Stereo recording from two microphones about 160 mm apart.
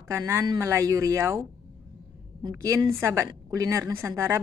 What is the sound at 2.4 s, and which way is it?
Speech, 20° right (ahead or behind).